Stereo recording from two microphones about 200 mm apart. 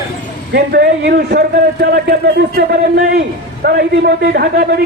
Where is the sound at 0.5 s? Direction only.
55° right (ahead or behind).